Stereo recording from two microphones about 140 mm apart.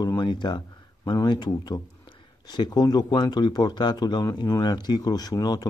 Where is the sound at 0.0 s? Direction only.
30° left (ahead or behind).